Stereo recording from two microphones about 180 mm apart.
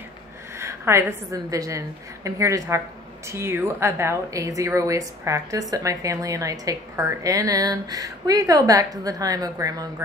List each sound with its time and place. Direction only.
0.6 s a woman's voice: 15° right (ahead or behind)